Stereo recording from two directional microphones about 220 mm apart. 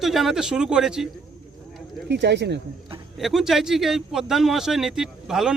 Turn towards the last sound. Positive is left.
turn(degrees=0)  # may be behind; listen again after turning